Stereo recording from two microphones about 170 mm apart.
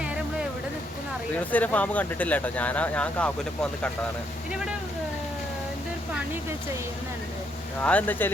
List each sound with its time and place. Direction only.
0.0 s a sound: 5° right (ahead or behind)
1.5 s speech: 10° left (ahead or behind)
7.8 s speech: 10° left (ahead or behind)